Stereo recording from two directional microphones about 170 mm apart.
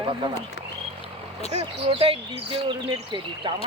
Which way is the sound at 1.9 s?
35° right (ahead or behind).